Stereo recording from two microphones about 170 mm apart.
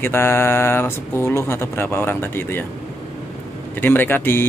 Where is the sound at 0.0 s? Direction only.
15° left (ahead or behind).